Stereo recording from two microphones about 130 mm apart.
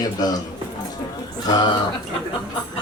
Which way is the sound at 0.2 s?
30° left (ahead or behind).